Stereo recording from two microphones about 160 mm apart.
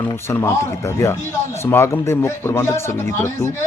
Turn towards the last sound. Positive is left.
turn(degrees=15)  # may be behind; listen again after turning